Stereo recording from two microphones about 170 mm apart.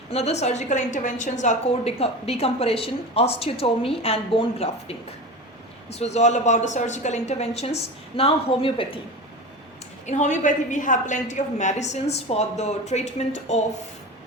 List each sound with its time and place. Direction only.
0.1 s a woman's voice: 40° left (ahead or behind)
10.1 s a woman's voice: 45° left (ahead or behind)